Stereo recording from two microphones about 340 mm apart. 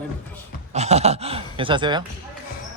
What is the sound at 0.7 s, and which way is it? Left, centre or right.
Speech, centre.